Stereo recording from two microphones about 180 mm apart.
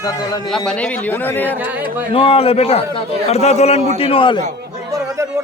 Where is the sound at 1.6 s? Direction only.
10° right (ahead or behind).